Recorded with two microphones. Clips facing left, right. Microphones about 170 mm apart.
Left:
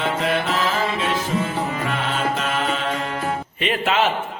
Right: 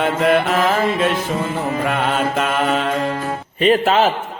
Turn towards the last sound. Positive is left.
turn(degrees=-40)  # may be behind; listen again after turning